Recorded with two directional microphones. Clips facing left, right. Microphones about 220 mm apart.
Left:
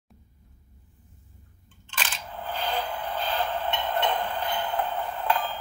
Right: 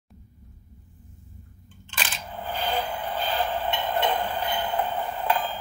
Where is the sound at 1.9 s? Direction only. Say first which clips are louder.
Right 1 dB; 10° right (ahead or behind).